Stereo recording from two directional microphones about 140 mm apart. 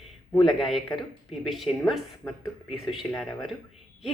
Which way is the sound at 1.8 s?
Centre (ahead or behind).